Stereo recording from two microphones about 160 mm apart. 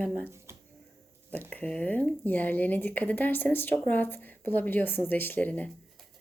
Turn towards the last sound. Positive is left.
turn(degrees=10)  # may be behind; listen again after turning